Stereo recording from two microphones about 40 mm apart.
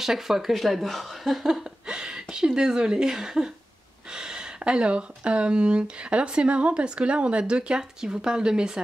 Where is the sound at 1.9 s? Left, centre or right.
Centre.